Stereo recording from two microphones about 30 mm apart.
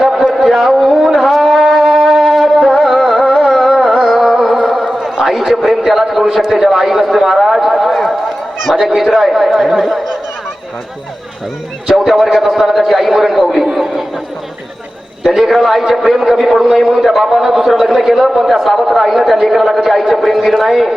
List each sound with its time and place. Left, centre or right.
0.4 s a sound: centre
0.7 s shofar: centre
2.6 s music: centre
3.5 s carnatic music: centre
4.6 s a sound: centre
4.9 s chatter: right
5.4 s a man's voice: centre
12.0 s a man's voice: centre
13.7 s chatter: centre
15.3 s a man's voice: centre